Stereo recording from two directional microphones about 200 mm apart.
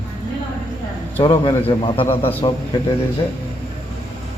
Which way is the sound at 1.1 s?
30° left (ahead or behind).